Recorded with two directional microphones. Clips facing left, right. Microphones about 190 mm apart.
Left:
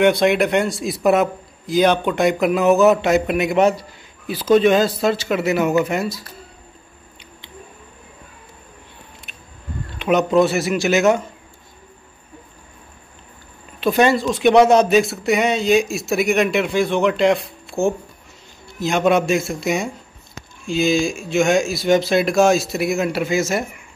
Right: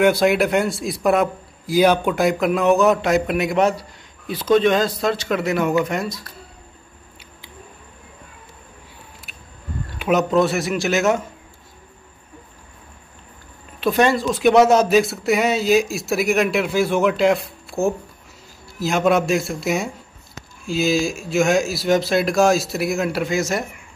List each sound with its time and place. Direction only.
0.0 s speech: centre (ahead or behind)
1.7 s speech: 10° right (ahead or behind)
9.9 s speech: centre (ahead or behind)
13.7 s speech: centre (ahead or behind)